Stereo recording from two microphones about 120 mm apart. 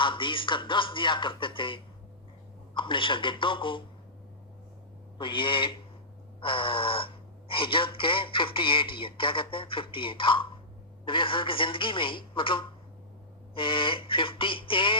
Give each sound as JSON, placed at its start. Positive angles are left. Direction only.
{"t": 0.0, "sound": "speech", "side_deg": 45}
{"t": 5.1, "sound": "speech", "side_deg": 45}